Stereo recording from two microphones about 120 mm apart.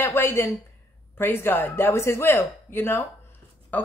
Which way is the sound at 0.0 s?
20° left (ahead or behind).